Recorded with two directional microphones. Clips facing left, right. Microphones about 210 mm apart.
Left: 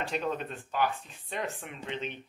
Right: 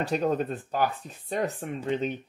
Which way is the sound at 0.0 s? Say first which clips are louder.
Right 7 dB; 40° right (ahead or behind).